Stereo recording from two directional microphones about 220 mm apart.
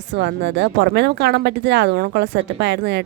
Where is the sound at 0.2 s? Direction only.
50° right (ahead or behind).